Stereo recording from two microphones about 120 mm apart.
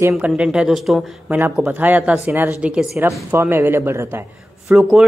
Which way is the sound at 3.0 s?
20° right (ahead or behind).